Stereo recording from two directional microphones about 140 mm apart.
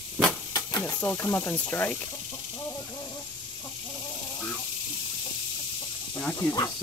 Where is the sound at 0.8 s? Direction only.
10° left (ahead or behind).